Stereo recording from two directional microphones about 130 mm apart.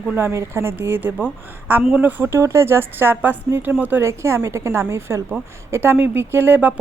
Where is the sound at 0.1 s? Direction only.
15° right (ahead or behind).